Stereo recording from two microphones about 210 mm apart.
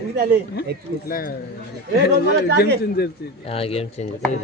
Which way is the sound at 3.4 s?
25° left (ahead or behind).